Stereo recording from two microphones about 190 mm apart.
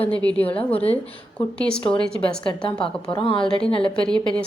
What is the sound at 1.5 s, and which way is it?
Speech, 5° left (ahead or behind).